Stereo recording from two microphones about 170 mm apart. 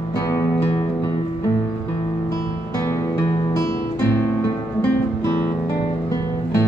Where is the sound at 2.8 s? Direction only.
15° left (ahead or behind).